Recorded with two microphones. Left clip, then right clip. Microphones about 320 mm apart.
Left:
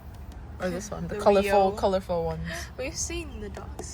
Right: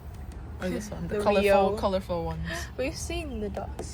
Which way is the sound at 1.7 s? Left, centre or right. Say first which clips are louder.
Left 2 dB; left.